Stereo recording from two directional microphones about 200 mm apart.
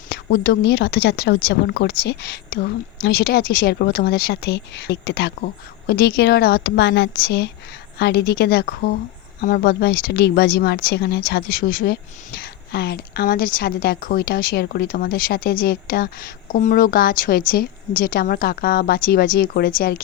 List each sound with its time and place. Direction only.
0.1 s speech: 55° left (ahead or behind)